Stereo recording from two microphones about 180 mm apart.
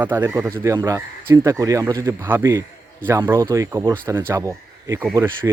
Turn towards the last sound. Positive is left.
turn(degrees=-15)  # may be behind; listen again after turning